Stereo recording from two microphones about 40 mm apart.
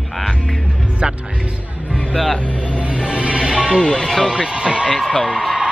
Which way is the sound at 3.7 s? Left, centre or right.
Left.